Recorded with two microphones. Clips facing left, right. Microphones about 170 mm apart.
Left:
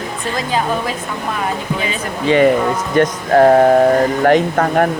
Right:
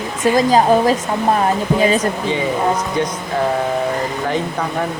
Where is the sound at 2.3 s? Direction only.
70° left (ahead or behind).